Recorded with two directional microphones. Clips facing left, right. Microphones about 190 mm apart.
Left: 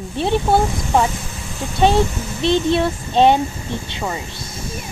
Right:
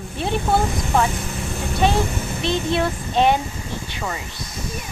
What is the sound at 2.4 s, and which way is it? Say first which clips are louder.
Speech: left 5 dB; 30° left (ahead or behind).